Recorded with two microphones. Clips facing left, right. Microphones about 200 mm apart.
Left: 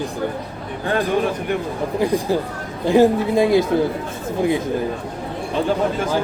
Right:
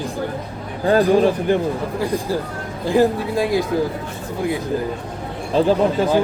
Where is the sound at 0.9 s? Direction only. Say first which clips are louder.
Right 5 dB; 30° right (ahead or behind).